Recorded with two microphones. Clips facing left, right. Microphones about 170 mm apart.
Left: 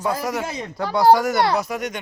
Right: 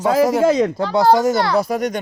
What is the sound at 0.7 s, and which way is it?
Speech, 25° right (ahead or behind).